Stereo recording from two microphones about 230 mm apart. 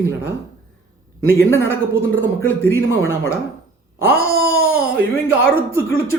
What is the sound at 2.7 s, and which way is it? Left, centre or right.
Speech, left.